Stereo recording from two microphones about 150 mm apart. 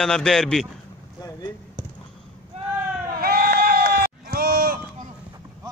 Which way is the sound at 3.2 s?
90° right.